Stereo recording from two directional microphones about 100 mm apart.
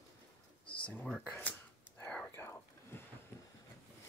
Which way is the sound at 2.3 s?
25° left (ahead or behind).